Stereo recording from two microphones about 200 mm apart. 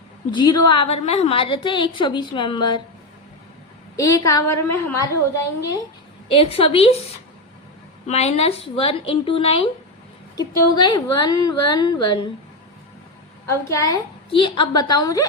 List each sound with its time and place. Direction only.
0.3 s a woman's voice: 20° left (ahead or behind)
3.9 s a woman's voice: 15° left (ahead or behind)
6.3 s a woman's voice: 30° left (ahead or behind)
8.0 s a woman's voice: 30° left (ahead or behind)
13.5 s a woman's voice: 15° left (ahead or behind)